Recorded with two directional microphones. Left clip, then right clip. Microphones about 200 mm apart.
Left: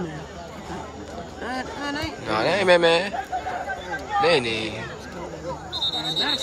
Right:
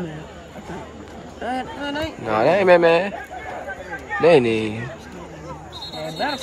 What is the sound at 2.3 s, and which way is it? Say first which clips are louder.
Speech: right 4 dB; centre (ahead or behind).